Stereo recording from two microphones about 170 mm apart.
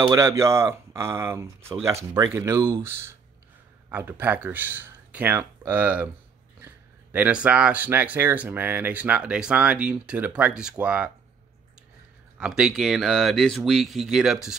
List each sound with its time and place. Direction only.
0.0 s speech: 20° right (ahead or behind)
12.4 s speech: 5° right (ahead or behind)